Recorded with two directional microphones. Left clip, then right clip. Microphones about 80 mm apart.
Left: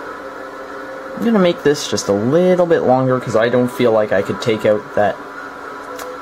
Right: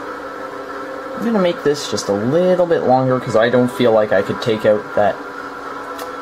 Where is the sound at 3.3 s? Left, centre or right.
Centre.